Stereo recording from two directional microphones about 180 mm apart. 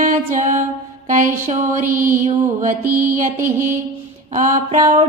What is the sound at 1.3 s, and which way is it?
Music, 45° right (ahead or behind).